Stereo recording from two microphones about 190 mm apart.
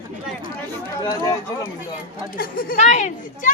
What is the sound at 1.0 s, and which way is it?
Speech, 20° left (ahead or behind).